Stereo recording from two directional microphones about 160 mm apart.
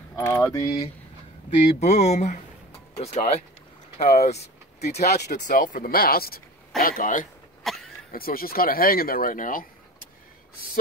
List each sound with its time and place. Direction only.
0.1 s keys jangling: 20° left (ahead or behind)
1.6 s speech: 40° left (ahead or behind)
4.0 s vehicle: 40° left (ahead or behind)
4.9 s speech: 45° left (ahead or behind)
5.2 s speech: 60° left (ahead or behind)
7.6 s a sound: centre (ahead or behind)
8.1 s speech: 65° left (ahead or behind)